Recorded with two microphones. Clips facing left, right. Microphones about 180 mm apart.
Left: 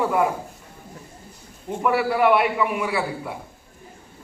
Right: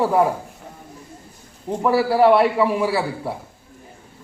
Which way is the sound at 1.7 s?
35° right (ahead or behind).